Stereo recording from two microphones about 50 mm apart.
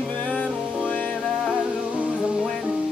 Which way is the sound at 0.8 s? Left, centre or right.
Left.